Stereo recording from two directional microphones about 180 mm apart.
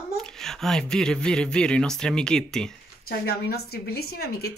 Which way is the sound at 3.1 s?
60° left (ahead or behind).